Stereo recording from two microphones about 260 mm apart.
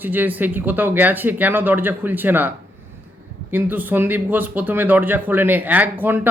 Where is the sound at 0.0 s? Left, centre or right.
Centre.